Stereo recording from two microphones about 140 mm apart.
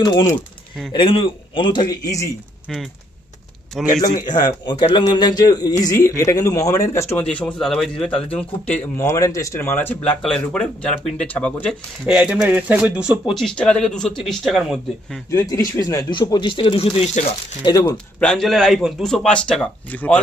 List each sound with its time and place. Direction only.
0.0 s a man's voice: 25° left (ahead or behind)
0.9 s speech: 40° left (ahead or behind)
3.8 s speech: centre (ahead or behind)
4.3 s a man's voice: 30° left (ahead or behind)
7.2 s speech: 10° left (ahead or behind)
8.9 s speech: 20° left (ahead or behind)
12.1 s speech: 5° right (ahead or behind)
15.3 s a man's voice: 20° left (ahead or behind); by 17.3 s 50° left (ahead or behind)
17.9 s speech: 5° left (ahead or behind)